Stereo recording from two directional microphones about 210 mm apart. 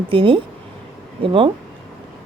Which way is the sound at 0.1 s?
25° right (ahead or behind).